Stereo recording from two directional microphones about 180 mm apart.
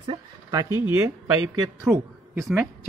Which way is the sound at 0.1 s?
20° right (ahead or behind).